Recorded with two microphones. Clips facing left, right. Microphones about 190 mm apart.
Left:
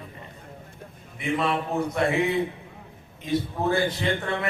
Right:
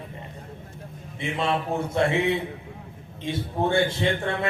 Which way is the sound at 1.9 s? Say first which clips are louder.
Right 2 dB; 25° right (ahead or behind).